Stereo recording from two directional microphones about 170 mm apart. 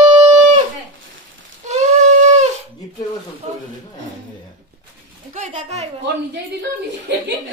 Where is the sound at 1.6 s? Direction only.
40° right (ahead or behind).